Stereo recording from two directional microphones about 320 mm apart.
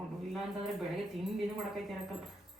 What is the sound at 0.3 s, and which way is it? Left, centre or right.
Speech, centre.